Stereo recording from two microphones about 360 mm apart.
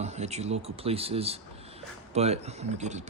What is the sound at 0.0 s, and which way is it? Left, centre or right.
Speech, centre.